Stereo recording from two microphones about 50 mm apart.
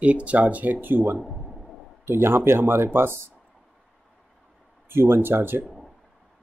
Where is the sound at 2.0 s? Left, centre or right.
Right.